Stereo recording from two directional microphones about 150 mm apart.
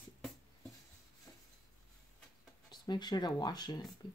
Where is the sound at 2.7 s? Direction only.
30° left (ahead or behind).